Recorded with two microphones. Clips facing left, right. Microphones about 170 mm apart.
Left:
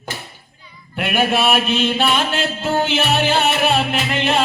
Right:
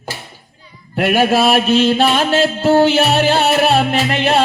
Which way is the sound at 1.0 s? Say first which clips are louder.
Right 5 dB; 40° right (ahead or behind).